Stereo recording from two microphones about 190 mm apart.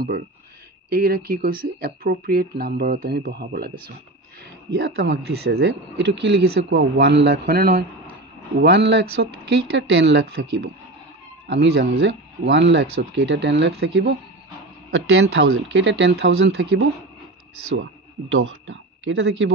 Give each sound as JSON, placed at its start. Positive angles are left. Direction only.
{"t": 0.8, "sound": "speech", "side_deg": -55}
{"t": 4.7, "sound": "a man's voice", "side_deg": -65}
{"t": 8.5, "sound": "speech", "side_deg": -65}
{"t": 14.9, "sound": "speech", "side_deg": -90}
{"t": 18.3, "sound": "speech", "side_deg": -90}